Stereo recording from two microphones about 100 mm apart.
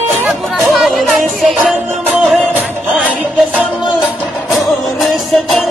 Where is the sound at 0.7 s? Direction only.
Centre (ahead or behind).